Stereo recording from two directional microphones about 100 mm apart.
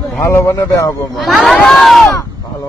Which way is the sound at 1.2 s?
Centre (ahead or behind).